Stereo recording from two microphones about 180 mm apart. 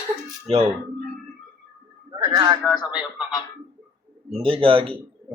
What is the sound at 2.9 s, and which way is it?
Speech, 5° right (ahead or behind).